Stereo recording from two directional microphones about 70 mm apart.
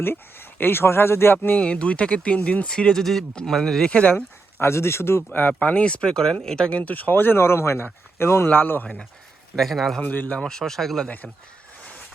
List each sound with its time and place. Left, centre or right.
0.0 s speech: left
1.6 s speech: centre
3.8 s speech: centre
4.6 s speech: left
5.3 s speech: left
9.6 s a man's voice: centre
10.0 s speech: left
10.4 s speech: centre
11.8 s vehicle: centre